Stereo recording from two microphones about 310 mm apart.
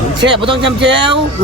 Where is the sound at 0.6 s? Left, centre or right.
Right.